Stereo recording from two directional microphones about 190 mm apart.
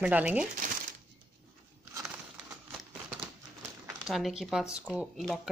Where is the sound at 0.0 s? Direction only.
5° right (ahead or behind).